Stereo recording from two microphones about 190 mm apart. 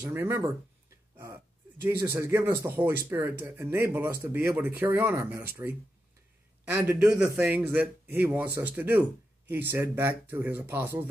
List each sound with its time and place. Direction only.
0.0 s speech: 10° right (ahead or behind)
1.1 s a sound: 10° right (ahead or behind)
2.8 s speech: 10° right (ahead or behind)